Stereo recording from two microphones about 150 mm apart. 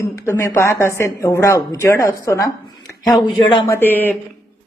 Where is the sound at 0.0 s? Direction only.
20° left (ahead or behind).